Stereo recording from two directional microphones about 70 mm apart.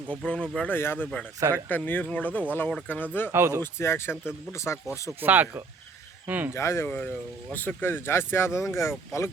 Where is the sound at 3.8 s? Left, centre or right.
Left.